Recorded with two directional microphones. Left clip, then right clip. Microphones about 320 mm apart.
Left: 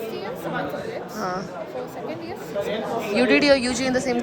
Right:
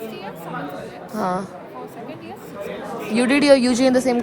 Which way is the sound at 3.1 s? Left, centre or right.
Centre.